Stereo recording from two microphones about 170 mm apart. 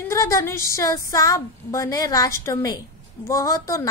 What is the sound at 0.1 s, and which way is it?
A woman's voice, 20° left (ahead or behind).